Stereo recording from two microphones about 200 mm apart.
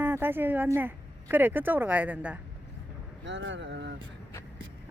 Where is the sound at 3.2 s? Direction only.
65° right (ahead or behind).